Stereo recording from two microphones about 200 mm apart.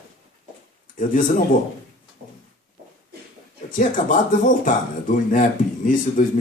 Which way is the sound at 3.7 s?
40° left (ahead or behind).